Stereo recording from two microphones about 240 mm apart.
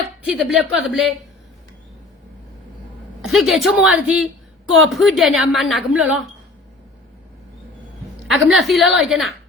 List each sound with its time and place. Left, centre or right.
0.3 s a woman's voice: centre
3.2 s a woman's voice: centre
8.3 s a woman's voice: centre